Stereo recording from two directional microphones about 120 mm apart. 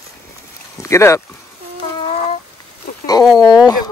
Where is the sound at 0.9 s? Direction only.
25° left (ahead or behind).